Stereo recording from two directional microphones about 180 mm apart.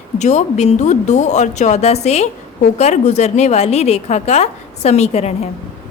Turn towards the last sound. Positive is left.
turn(degrees=35)  # may be behind; listen again after turning